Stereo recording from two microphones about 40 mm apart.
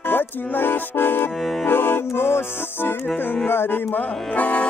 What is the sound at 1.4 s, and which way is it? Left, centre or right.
Accordion, centre.